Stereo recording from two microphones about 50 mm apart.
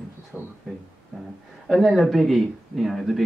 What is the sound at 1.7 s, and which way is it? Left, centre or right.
Speech, centre.